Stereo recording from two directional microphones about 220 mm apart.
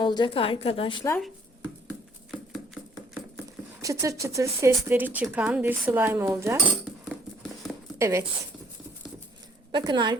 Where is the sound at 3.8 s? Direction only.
15° right (ahead or behind).